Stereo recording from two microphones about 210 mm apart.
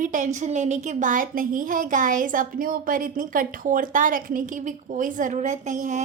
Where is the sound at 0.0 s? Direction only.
35° right (ahead or behind).